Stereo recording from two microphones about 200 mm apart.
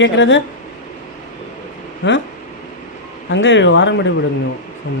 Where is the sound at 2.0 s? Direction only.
65° left (ahead or behind).